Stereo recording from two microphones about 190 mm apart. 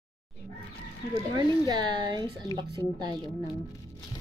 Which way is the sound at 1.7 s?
25° right (ahead or behind).